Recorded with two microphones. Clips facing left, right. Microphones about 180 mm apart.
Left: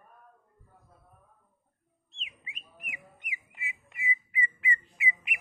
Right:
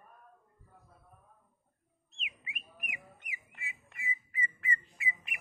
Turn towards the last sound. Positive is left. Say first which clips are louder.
# left 5 dB
turn(degrees=15)  # may be behind; listen again after turning